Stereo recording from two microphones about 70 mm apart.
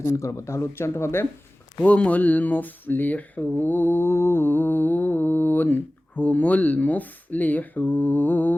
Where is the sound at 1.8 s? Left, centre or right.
Centre.